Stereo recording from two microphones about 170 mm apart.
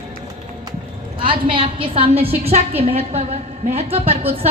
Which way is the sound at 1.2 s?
30° right (ahead or behind).